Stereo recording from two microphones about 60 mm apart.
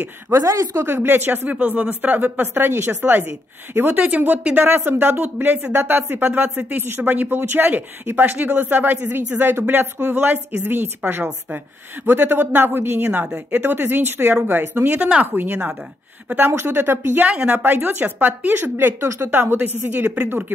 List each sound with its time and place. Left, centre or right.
0.3 s speech: right
0.8 s speech: right
1.5 s speech: right
3.3 s speech: right
3.9 s a woman's voice: right
4.6 s speech: right
12.1 s speech: right
13.2 s speech: right
17.2 s a woman's voice: right
18.6 s speech: right